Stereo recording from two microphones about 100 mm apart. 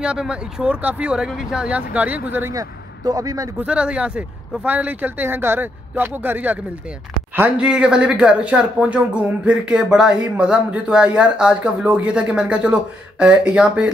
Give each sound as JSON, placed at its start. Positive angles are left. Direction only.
{"t": 0.0, "sound": "speech", "side_deg": -10}
{"t": 2.5, "sound": "a man's voice", "side_deg": -40}
{"t": 3.6, "sound": "speech", "side_deg": -10}